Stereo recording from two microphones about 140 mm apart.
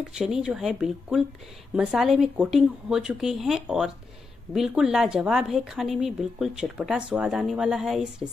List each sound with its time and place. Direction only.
0.2 s a woman's voice: 5° right (ahead or behind)